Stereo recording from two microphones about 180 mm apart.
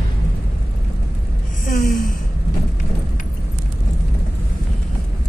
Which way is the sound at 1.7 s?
50° left (ahead or behind).